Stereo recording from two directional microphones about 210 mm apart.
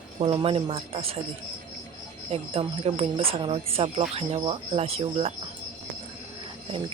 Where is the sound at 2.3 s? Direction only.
30° right (ahead or behind).